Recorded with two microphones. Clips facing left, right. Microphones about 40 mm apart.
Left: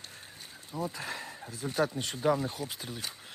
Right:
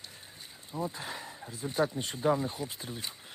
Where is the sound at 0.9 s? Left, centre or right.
Left.